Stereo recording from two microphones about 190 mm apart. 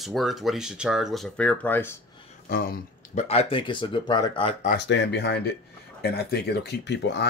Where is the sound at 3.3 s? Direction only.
30° left (ahead or behind).